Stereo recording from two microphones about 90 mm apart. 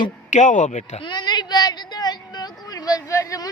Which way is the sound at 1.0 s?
55° left (ahead or behind).